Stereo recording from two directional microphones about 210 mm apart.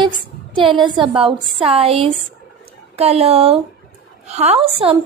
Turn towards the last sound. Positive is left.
turn(degrees=-25)  # may be behind; listen again after turning